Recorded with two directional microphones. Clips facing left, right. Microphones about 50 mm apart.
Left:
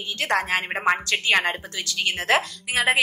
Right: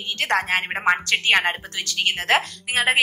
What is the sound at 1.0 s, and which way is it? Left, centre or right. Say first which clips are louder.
A woman's voice: right 2 dB; right.